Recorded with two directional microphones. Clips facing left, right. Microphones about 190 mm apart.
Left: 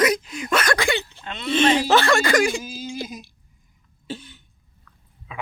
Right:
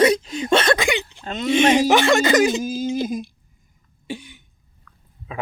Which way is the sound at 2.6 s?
45° right (ahead or behind).